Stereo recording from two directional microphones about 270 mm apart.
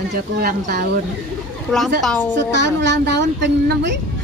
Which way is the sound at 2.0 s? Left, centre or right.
Centre.